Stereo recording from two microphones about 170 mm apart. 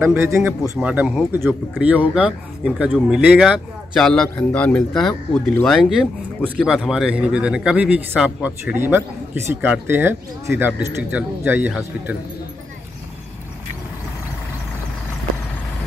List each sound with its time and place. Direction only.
0.0 s speech: 15° right (ahead or behind)
0.7 s speech: 5° right (ahead or behind)